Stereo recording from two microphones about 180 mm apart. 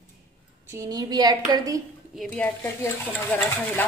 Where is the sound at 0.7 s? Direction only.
20° right (ahead or behind).